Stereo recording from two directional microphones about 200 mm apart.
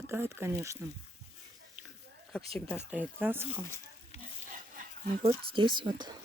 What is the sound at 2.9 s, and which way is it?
Speech, 10° right (ahead or behind).